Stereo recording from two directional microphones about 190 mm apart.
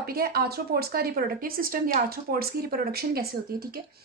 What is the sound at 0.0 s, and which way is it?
A woman's voice, 55° right (ahead or behind).